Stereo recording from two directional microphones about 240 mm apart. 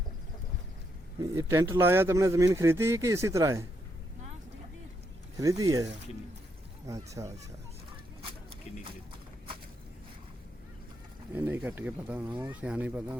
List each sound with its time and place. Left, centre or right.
1.2 s speech: centre
5.4 s speech: centre
11.3 s speech: centre